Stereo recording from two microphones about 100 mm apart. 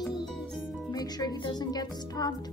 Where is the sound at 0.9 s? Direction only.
40° left (ahead or behind).